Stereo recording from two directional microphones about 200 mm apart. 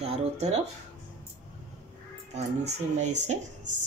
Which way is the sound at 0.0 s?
30° right (ahead or behind).